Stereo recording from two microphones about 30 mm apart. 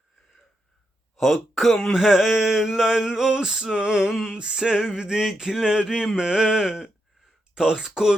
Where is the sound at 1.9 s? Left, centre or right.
Centre.